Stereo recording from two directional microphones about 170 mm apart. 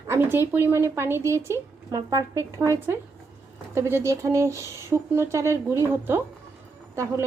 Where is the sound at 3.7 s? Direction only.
15° right (ahead or behind).